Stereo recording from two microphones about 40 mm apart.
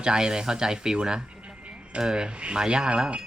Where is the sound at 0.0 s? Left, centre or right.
Right.